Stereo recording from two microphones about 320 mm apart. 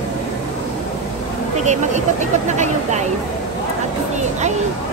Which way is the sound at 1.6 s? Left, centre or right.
Right.